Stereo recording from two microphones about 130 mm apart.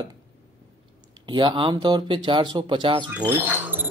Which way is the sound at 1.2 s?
35° right (ahead or behind).